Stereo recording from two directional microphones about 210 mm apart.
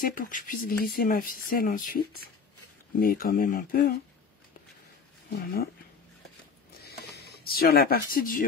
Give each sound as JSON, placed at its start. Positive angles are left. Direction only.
{"t": 0.0, "sound": "speech", "side_deg": 40}
{"t": 5.3, "sound": "speech", "side_deg": 45}
{"t": 7.2, "sound": "speech", "side_deg": 45}